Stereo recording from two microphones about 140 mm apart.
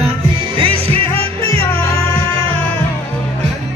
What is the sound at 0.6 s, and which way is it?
Music, 40° right (ahead or behind).